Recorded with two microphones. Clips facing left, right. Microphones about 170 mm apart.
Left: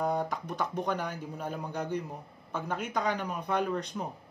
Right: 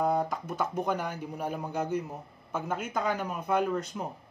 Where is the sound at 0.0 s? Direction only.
Centre (ahead or behind).